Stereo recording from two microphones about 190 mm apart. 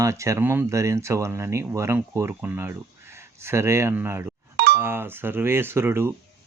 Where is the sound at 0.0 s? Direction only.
15° right (ahead or behind).